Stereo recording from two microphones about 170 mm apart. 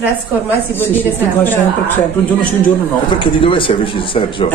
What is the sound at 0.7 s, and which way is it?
Speech, 10° left (ahead or behind).